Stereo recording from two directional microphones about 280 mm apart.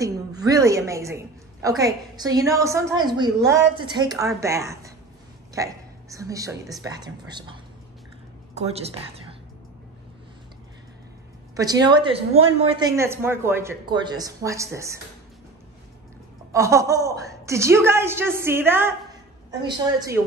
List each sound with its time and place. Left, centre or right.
0.0 s a sound: centre
1.8 s a woman's voice: centre
8.5 s a woman's voice: right
11.5 s a woman's voice: centre
16.5 s a woman's voice: centre